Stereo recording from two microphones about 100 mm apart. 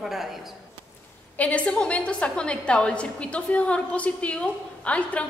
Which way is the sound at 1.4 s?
15° left (ahead or behind).